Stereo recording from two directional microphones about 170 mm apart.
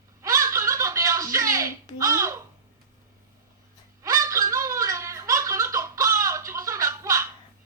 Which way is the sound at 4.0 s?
20° right (ahead or behind).